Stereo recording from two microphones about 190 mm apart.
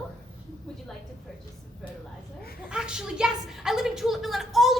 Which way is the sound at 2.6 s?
5° right (ahead or behind).